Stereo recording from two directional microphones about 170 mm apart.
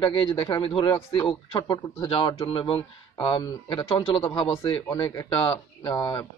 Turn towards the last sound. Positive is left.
turn(degrees=20)  # may be behind; listen again after turning